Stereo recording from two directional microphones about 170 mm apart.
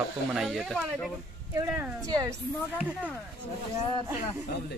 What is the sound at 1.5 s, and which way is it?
Speech, 10° right (ahead or behind).